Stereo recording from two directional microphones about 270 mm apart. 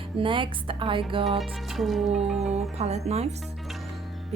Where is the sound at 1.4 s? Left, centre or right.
Centre.